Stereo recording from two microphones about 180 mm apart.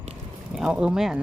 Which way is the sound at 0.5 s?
5° right (ahead or behind).